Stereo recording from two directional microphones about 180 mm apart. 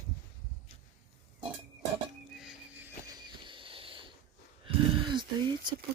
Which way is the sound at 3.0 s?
25° right (ahead or behind).